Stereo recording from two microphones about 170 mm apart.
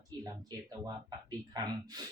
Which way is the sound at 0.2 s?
20° right (ahead or behind).